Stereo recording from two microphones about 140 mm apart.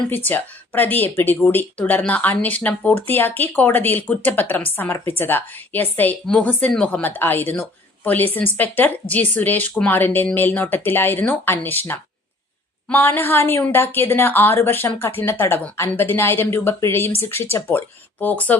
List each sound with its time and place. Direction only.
0.1 s speech: 15° left (ahead or behind)